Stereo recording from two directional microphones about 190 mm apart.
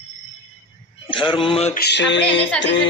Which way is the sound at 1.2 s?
25° left (ahead or behind).